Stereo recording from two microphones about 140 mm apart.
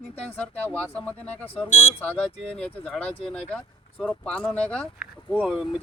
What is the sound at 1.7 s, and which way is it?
Speech, 60° left (ahead or behind).